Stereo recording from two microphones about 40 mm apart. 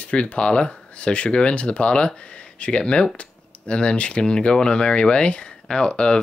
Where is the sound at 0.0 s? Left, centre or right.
Left.